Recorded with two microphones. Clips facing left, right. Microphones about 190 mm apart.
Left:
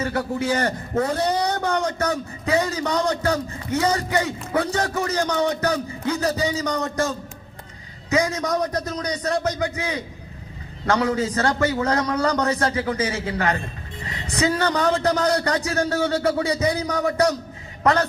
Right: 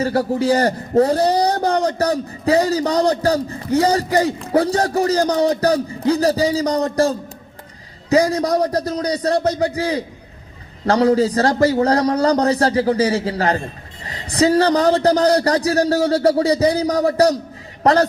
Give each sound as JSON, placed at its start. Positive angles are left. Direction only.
{"t": 0.0, "sound": "a man's voice", "side_deg": -35}